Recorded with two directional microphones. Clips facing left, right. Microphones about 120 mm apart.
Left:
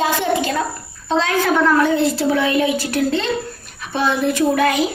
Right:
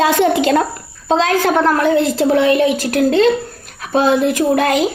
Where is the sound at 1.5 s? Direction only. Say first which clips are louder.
Even; 35° right (ahead or behind).